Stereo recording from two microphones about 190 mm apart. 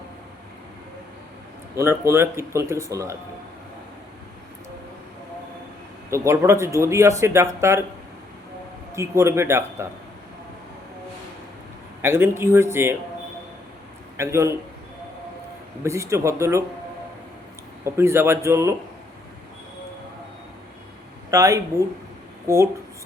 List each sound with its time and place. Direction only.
1.7 s speech: 15° right (ahead or behind)
6.1 s speech: 15° right (ahead or behind)
8.9 s speech: 15° right (ahead or behind)
12.0 s speech: 10° right (ahead or behind)
14.2 s speech: 15° right (ahead or behind)
15.8 s speech: 15° right (ahead or behind)
17.8 s speech: 15° right (ahead or behind)
21.2 s speech: 15° right (ahead or behind)